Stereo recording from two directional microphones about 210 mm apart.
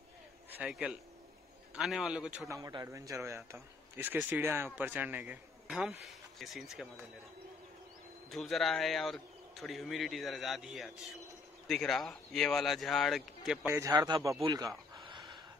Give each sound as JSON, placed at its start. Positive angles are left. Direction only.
{"t": 0.5, "sound": "a man's voice", "side_deg": -5}
{"t": 8.3, "sound": "speech", "side_deg": 0}
{"t": 13.7, "sound": "speech", "side_deg": -15}